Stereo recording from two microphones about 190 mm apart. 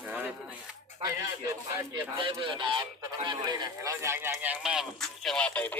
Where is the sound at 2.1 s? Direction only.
25° right (ahead or behind).